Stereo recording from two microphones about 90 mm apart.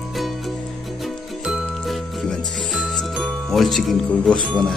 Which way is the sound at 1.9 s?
Centre (ahead or behind).